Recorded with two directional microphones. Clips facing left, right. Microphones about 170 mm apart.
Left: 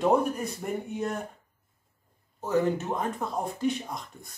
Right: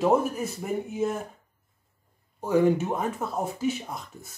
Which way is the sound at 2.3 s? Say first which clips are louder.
Right 4 dB; 10° right (ahead or behind).